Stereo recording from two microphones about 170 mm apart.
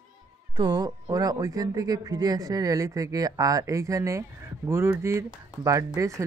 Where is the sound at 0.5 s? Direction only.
25° right (ahead or behind).